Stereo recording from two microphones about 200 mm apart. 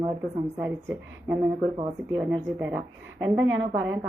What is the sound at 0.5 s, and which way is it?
A woman's voice, 10° right (ahead or behind).